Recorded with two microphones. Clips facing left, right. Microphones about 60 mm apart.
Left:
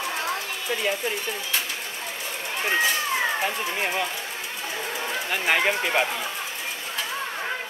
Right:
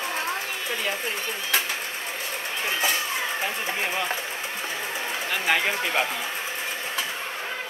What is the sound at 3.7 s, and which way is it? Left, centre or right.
Speech, centre.